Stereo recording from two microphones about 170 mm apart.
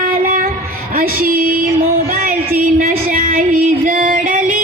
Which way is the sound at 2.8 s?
55° right (ahead or behind).